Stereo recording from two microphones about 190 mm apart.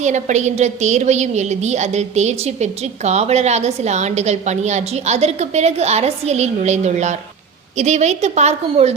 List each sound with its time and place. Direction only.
0.0 s a woman's voice: 40° right (ahead or behind)